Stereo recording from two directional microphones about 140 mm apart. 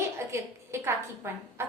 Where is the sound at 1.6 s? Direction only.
20° right (ahead or behind).